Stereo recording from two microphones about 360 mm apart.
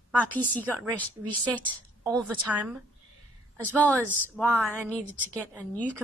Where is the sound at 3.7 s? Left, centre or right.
Centre.